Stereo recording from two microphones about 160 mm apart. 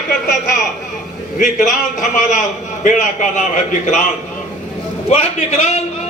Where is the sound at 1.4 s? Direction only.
55° left (ahead or behind).